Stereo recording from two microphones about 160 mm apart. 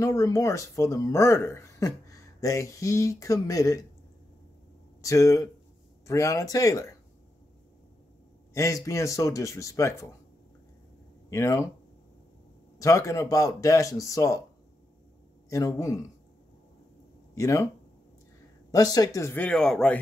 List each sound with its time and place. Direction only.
0.0 s speech: 20° left (ahead or behind)
5.0 s speech: 20° left (ahead or behind)
8.5 s speech: 20° left (ahead or behind)
11.2 s speech: 20° left (ahead or behind)
12.8 s speech: 20° left (ahead or behind)
15.5 s speech: 20° left (ahead or behind)
17.4 s speech: 20° left (ahead or behind)
18.7 s speech: 20° left (ahead or behind); by 20.0 s 5° left (ahead or behind)